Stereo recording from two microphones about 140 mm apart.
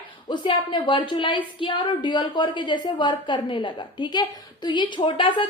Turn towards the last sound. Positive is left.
turn(degrees=35)  # may be behind; listen again after turning